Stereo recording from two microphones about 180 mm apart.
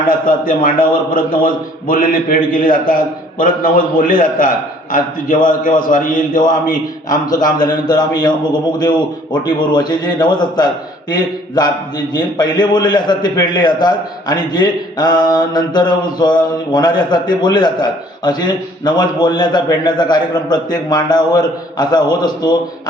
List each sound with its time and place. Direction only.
0.3 s a man's voice: 50° left (ahead or behind)
7.6 s mantra: 25° left (ahead or behind)